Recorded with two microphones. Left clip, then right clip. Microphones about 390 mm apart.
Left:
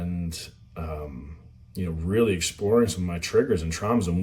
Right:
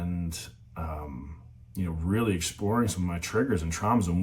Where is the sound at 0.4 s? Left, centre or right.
Centre.